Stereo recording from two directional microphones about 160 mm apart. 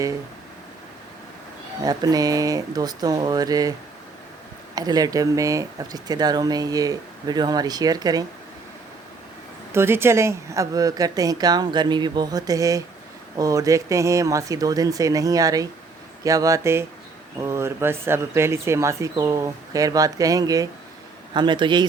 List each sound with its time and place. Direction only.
1.8 s speech: 25° right (ahead or behind)
9.7 s speech: 15° right (ahead or behind)